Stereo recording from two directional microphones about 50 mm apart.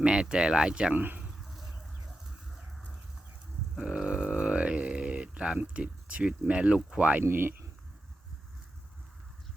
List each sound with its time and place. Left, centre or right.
0.0 s speech: centre
0.9 s speech: right
3.8 s a sound: centre
5.7 s speech: right
7.3 s speech: right